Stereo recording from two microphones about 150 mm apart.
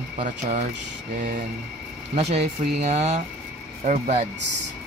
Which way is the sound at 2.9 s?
50° right (ahead or behind).